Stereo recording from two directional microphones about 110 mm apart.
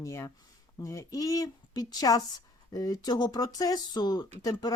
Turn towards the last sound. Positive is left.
turn(degrees=35)  # may be behind; listen again after turning